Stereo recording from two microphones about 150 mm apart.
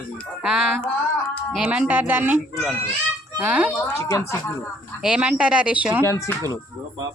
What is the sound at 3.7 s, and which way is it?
Speech, 20° left (ahead or behind).